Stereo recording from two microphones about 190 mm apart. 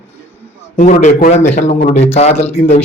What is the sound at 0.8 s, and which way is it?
A man's voice, 45° left (ahead or behind).